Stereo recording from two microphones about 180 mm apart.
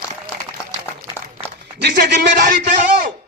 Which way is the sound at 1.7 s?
65° right (ahead or behind).